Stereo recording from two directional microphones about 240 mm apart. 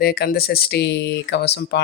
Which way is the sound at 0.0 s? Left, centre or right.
Left.